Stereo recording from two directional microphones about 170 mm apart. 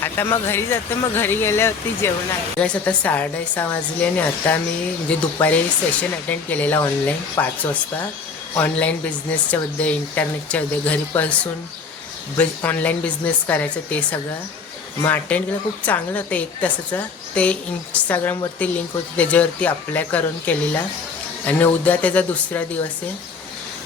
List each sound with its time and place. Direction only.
0.0 s speech: 15° left (ahead or behind)